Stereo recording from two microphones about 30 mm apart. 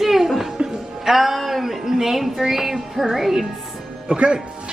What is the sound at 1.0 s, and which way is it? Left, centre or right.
Music, centre.